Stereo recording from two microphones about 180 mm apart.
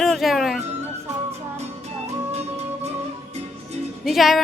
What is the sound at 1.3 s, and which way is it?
Music, 35° right (ahead or behind).